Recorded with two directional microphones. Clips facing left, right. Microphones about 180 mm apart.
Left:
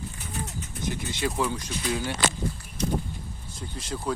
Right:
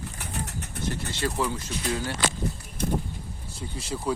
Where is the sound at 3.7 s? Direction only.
10° right (ahead or behind).